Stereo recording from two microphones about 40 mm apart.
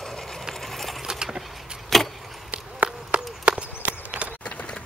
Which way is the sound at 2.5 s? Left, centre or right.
Right.